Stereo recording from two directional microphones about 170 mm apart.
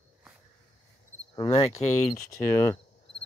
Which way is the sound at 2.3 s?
15° left (ahead or behind).